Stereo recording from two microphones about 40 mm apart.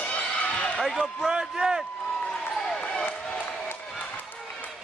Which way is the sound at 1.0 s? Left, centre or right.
Centre.